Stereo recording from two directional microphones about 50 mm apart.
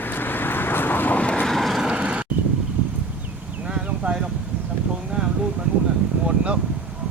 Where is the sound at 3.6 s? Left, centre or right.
Centre.